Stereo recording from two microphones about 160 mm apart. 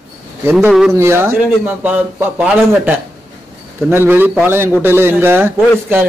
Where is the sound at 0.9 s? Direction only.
15° right (ahead or behind).